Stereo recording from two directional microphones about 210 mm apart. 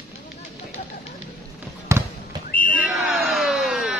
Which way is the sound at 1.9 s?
15° right (ahead or behind).